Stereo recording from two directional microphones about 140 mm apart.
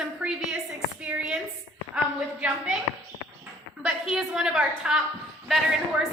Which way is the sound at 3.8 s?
5° right (ahead or behind).